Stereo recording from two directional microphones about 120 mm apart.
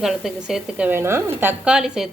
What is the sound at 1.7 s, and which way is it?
Speech, 5° right (ahead or behind).